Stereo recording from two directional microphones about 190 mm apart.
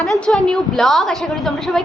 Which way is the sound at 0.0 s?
Centre (ahead or behind).